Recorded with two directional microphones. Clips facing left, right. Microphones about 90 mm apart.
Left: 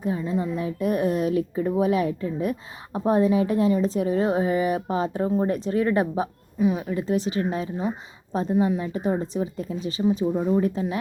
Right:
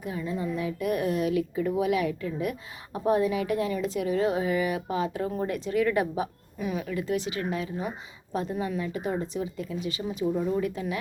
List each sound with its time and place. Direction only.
0.0 s a woman's voice: 30° left (ahead or behind)